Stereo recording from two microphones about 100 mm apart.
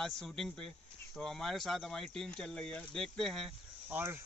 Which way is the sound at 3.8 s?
20° right (ahead or behind).